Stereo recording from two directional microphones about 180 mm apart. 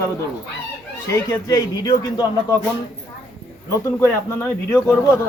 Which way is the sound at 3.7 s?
15° left (ahead or behind).